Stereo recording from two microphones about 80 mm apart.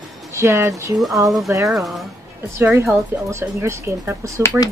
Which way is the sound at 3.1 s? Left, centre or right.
Right.